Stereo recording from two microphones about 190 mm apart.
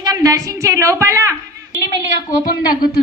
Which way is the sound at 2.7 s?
50° left (ahead or behind).